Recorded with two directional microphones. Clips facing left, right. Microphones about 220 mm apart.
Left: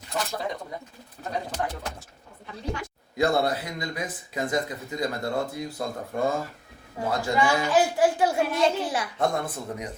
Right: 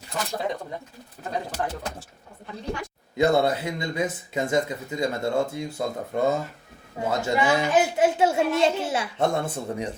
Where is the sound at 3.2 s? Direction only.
25° right (ahead or behind).